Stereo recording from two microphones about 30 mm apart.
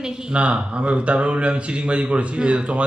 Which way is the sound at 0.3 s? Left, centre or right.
Right.